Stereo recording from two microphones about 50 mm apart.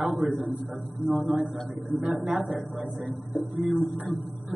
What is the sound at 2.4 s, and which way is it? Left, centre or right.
Speech, right.